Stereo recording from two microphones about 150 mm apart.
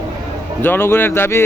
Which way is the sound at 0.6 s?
15° left (ahead or behind).